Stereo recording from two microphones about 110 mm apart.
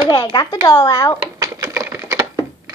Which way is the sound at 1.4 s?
30° right (ahead or behind).